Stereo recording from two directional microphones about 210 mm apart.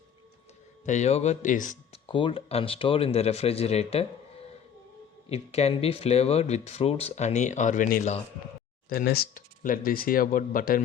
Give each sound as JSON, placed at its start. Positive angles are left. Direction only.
{"t": 0.9, "sound": "speech", "side_deg": 35}
{"t": 2.0, "sound": "speech", "side_deg": 25}
{"t": 8.9, "sound": "speech", "side_deg": 45}